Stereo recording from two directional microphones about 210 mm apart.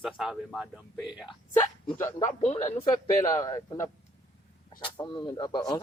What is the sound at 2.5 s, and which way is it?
Speech, 35° left (ahead or behind).